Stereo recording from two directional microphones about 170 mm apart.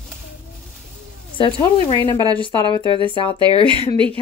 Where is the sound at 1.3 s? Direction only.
30° left (ahead or behind).